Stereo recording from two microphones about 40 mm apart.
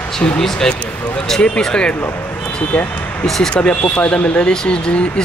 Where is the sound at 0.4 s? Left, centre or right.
Centre.